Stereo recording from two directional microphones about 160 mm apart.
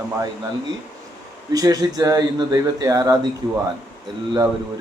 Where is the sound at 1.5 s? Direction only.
20° right (ahead or behind).